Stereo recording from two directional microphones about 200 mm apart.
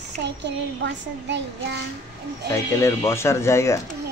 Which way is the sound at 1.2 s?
60° right (ahead or behind).